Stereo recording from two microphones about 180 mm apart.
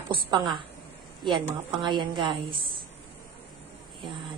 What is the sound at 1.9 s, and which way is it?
Speech, 25° right (ahead or behind).